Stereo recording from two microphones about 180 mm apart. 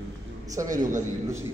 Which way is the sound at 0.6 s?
45° right (ahead or behind).